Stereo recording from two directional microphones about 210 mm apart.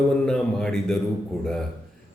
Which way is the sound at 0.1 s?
5° left (ahead or behind).